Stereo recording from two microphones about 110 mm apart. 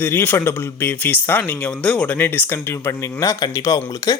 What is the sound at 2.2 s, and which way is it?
Speech, 20° left (ahead or behind).